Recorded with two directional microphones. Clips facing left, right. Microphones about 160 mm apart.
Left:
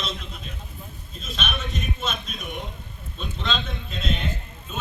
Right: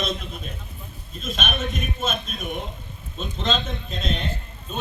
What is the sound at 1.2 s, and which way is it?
A man's voice, 50° right (ahead or behind).